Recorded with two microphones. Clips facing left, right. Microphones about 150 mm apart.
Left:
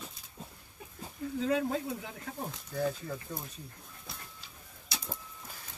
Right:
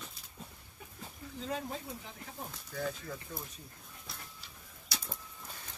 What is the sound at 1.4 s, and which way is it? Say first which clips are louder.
Speech: left 8 dB; 90° left.